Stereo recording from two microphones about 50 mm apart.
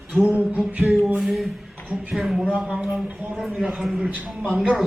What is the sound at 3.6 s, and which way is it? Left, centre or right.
Speech, centre.